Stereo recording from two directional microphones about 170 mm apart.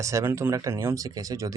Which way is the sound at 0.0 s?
15° right (ahead or behind).